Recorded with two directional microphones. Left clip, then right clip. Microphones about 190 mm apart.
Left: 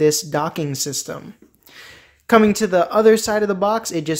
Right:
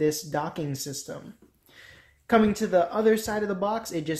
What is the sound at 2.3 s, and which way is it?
Speech, 30° left (ahead or behind).